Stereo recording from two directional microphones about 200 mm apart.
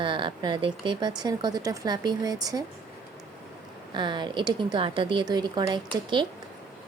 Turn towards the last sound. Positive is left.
turn(degrees=-20)  # may be behind; listen again after turning